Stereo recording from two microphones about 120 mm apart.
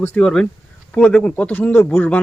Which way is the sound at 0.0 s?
10° left (ahead or behind).